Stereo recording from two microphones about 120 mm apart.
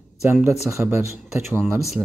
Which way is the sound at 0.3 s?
15° right (ahead or behind).